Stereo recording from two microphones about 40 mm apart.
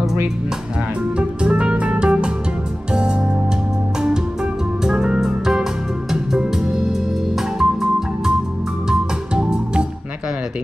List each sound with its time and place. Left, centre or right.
1.1 s music: right
4.8 s music: right